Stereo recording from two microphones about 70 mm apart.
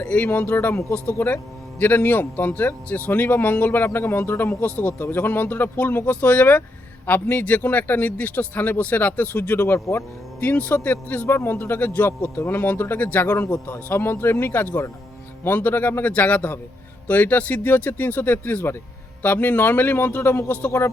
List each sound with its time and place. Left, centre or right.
0.0 s a man's voice: centre
0.3 s speech: left
1.2 s a man's voice: left
11.3 s a man's voice: left
13.3 s a man's voice: left